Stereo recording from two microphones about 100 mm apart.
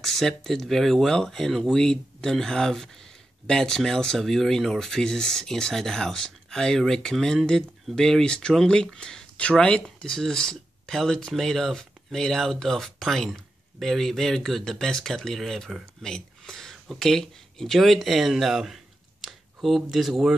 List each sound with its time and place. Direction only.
0.0 s speech: 5° left (ahead or behind)